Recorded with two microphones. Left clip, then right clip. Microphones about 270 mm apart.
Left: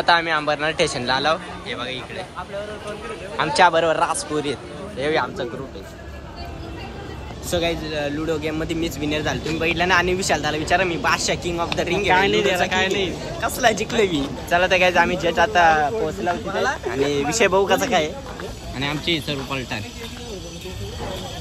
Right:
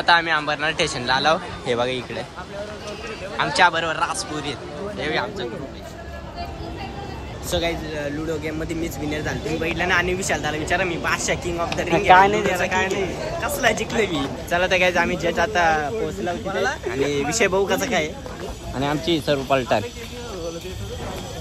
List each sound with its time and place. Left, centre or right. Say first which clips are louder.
0.0 s speech: even; centre
3.3 s speech: left 2 dB; centre
7.5 s speech: left 2 dB; centre
12.1 s speech: right 5 dB; centre
12.4 s speech: left 2 dB; centre